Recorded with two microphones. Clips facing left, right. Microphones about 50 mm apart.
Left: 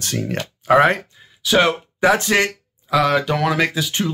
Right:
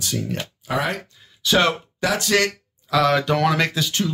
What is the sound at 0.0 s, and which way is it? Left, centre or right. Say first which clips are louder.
Speech: left 3 dB; left.